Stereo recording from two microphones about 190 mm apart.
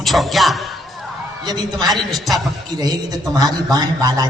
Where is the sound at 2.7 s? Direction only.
20° right (ahead or behind).